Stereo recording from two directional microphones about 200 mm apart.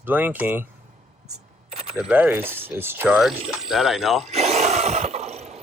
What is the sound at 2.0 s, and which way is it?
Speech, 5° right (ahead or behind).